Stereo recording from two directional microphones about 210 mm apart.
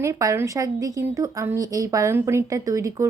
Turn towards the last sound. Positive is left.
turn(degrees=-15)  # may be behind; listen again after turning